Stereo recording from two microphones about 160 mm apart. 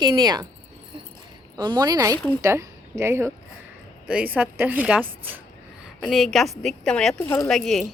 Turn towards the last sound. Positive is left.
turn(degrees=0)  # may be behind; listen again after turning